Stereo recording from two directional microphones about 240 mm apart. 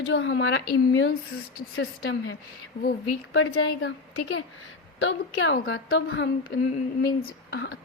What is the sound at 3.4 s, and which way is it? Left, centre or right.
A woman's voice, left.